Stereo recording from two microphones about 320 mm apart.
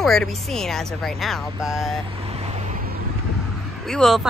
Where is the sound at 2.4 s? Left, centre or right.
Centre.